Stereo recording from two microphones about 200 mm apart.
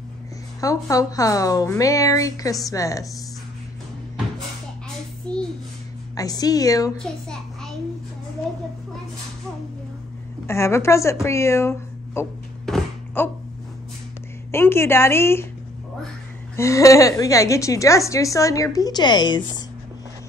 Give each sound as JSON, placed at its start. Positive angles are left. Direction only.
{"t": 0.6, "sound": "a woman's voice", "side_deg": 15}
{"t": 5.3, "sound": "babbling", "side_deg": 5}
{"t": 6.1, "sound": "a woman's voice", "side_deg": 20}
{"t": 7.0, "sound": "a child's voice", "side_deg": 5}
{"t": 10.4, "sound": "a woman's voice", "side_deg": 15}
{"t": 12.6, "sound": "a sound", "side_deg": 5}
{"t": 14.5, "sound": "a woman's voice", "side_deg": 10}
{"t": 16.5, "sound": "a woman's voice", "side_deg": 15}